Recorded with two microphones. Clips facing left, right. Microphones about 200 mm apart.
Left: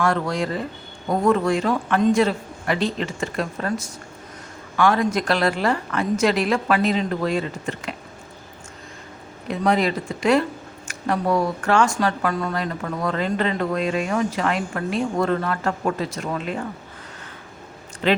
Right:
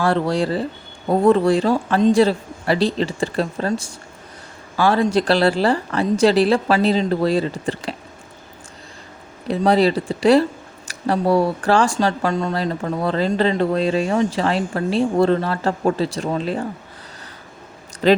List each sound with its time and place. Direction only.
0.0 s speech: 30° right (ahead or behind)
9.5 s speech: 35° right (ahead or behind)
18.0 s speech: 35° right (ahead or behind)